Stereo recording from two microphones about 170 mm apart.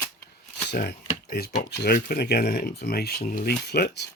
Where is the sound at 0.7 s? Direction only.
65° left (ahead or behind).